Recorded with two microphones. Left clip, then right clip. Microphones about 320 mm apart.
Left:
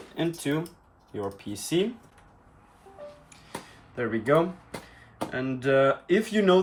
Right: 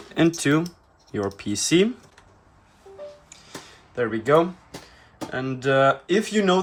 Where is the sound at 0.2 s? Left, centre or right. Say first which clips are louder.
Right 9 dB; right.